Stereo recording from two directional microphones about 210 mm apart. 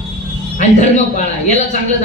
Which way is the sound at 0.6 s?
35° left (ahead or behind).